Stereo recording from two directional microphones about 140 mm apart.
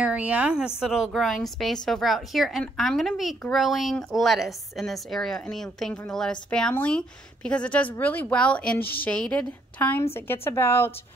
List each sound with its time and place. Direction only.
0.0 s a woman's voice: 10° right (ahead or behind); by 10.9 s 20° left (ahead or behind)